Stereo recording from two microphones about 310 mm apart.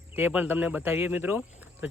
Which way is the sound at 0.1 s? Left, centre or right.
Centre.